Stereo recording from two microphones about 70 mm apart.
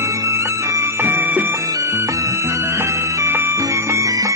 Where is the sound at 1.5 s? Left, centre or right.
Right.